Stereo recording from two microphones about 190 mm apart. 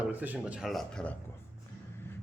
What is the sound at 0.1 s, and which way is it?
Speech, 10° right (ahead or behind).